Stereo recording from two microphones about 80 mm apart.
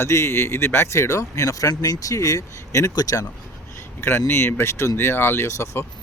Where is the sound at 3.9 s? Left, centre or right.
Left.